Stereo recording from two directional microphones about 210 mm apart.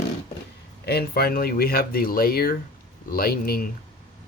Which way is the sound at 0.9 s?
50° left (ahead or behind).